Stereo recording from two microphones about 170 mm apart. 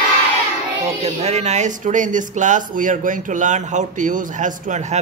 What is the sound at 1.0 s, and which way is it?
Speech, 40° right (ahead or behind).